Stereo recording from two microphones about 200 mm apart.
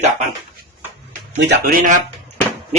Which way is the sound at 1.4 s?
45° right (ahead or behind).